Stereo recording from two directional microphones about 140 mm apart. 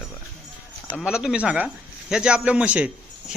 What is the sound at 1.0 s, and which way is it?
Speech, 5° right (ahead or behind).